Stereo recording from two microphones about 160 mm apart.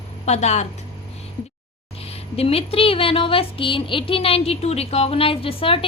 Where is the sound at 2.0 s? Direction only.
40° left (ahead or behind).